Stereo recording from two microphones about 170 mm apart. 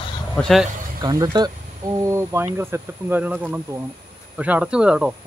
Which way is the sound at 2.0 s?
15° right (ahead or behind).